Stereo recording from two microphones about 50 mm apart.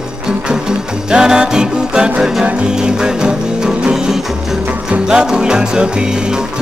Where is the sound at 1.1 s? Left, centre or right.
Centre.